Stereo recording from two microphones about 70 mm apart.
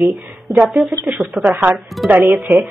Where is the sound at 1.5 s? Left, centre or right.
Right.